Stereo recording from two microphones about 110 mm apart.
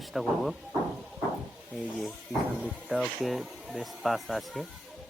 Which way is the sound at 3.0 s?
Centre (ahead or behind).